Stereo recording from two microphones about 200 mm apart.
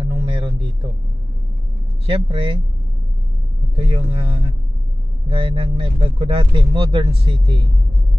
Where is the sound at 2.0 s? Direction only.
30° right (ahead or behind).